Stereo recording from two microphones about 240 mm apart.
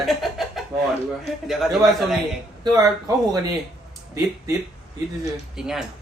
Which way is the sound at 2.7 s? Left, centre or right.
Centre.